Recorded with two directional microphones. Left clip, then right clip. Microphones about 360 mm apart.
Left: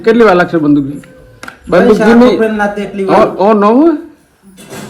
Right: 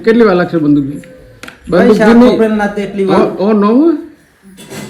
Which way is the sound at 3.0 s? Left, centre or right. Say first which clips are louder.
Left 4 dB; centre.